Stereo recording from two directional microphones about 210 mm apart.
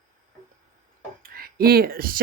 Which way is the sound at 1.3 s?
45° right (ahead or behind).